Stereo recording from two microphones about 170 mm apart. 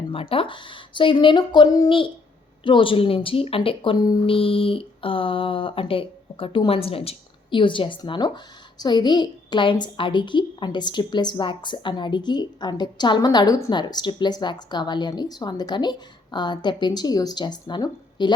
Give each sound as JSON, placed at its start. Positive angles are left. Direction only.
{"t": 0.1, "sound": "a woman's voice", "side_deg": 35}